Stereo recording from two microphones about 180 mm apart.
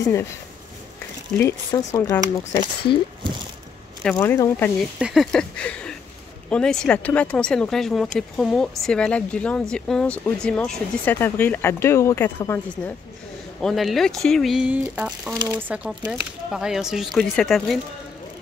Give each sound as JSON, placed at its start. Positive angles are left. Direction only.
{"t": 0.0, "sound": "speech", "side_deg": 15}
{"t": 1.4, "sound": "speech", "side_deg": 20}
{"t": 4.2, "sound": "speech", "side_deg": 15}
{"t": 4.9, "sound": "speech", "side_deg": -5}
{"t": 15.7, "sound": "speech", "side_deg": -5}